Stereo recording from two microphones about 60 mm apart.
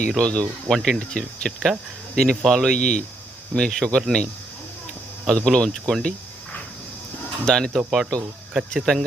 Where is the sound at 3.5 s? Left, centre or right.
Left.